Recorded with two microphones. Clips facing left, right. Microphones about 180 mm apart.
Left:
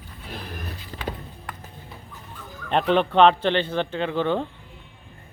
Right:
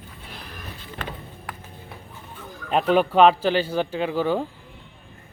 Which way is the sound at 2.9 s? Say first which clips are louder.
Right 1 dB; 5° right (ahead or behind).